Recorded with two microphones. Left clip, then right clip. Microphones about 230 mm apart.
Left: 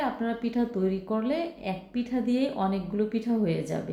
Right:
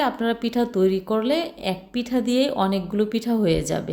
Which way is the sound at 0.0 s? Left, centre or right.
Right.